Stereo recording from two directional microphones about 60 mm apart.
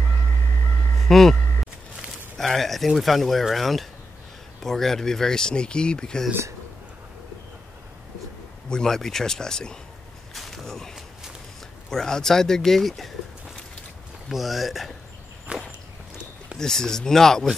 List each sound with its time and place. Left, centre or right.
1.0 s speech: centre
2.3 s speech: centre
8.6 s speech: centre
10.3 s a sound: centre
11.9 s speech: centre
14.3 s speech: centre
15.5 s walk: centre
16.5 s speech: centre